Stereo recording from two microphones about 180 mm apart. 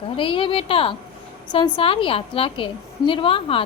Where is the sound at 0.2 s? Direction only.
30° left (ahead or behind).